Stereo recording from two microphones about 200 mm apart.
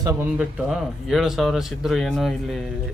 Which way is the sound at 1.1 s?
Centre (ahead or behind).